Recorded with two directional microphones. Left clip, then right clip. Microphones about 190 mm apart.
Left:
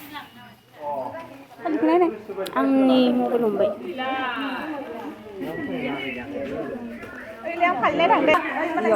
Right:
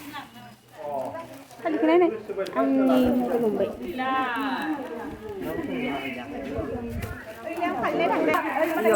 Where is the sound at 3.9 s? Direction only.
75° right (ahead or behind).